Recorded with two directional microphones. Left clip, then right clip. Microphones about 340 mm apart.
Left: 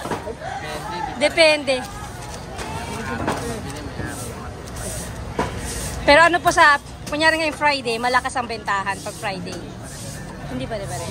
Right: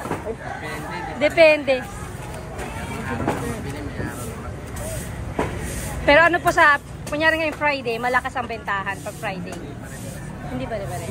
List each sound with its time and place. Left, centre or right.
1.2 s a woman's voice: centre
6.0 s a woman's voice: centre